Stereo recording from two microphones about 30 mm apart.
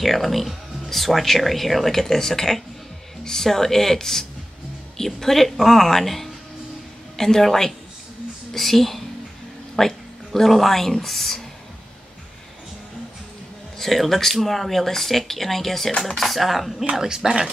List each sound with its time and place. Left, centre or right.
0.0 s speech: centre
13.7 s speech: centre
16.9 s speech: centre